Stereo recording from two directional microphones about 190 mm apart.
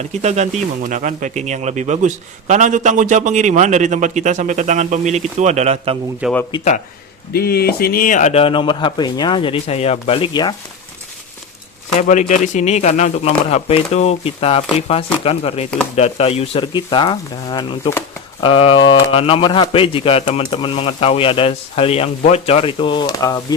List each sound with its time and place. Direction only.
0.2 s speech: 35° right (ahead or behind)
6.2 s speech: 5° right (ahead or behind)
7.3 s speech: 55° left (ahead or behind); by 10.5 s 25° left (ahead or behind)
11.9 s a man's voice: 40° left (ahead or behind); by 18.4 s 20° left (ahead or behind)
18.4 s a man's voice: 30° left (ahead or behind)